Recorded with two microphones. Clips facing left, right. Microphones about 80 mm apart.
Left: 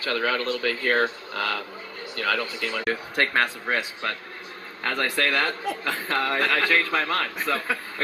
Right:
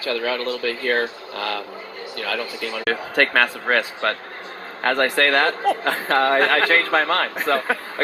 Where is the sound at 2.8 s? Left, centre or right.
Right.